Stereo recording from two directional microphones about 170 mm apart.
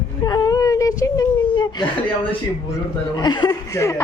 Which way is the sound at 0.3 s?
20° left (ahead or behind).